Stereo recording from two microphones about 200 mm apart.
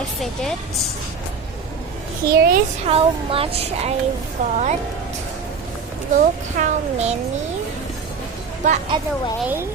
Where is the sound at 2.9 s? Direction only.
30° right (ahead or behind).